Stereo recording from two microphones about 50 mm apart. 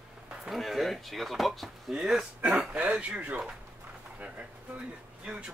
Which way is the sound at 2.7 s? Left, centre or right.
Right.